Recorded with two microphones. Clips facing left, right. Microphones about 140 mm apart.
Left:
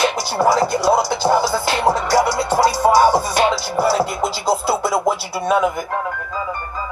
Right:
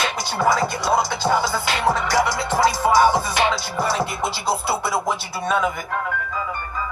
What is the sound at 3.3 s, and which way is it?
Music, 35° left (ahead or behind).